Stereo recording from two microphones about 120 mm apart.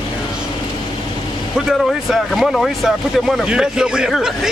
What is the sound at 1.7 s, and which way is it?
Speech, centre (ahead or behind).